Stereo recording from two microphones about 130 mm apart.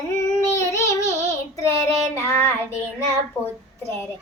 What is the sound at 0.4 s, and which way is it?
Child singing, 20° left (ahead or behind).